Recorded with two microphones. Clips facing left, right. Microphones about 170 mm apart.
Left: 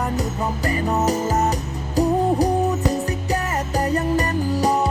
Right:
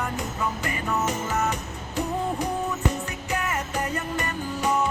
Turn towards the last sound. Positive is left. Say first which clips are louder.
# left 6 dB
turn(degrees=35)  # may be behind; listen again after turning